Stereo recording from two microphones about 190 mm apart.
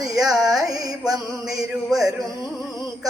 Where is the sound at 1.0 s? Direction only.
Centre (ahead or behind).